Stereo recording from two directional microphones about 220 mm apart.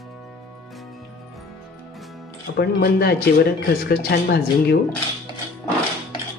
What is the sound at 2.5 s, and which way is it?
Speech, 45° left (ahead or behind).